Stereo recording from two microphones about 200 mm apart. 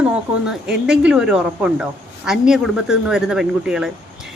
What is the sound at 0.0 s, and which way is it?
A woman's voice, 5° right (ahead or behind).